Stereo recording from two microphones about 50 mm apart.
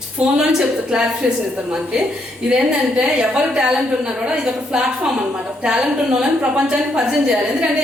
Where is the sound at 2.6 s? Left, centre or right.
Centre.